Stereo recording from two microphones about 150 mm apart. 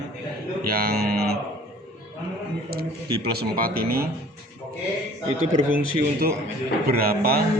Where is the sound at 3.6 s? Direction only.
80° right.